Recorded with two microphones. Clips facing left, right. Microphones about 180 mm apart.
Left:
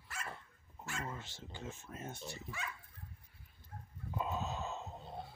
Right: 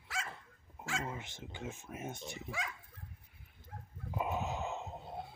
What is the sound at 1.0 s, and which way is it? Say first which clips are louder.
Speech: right 3 dB; 15° right (ahead or behind).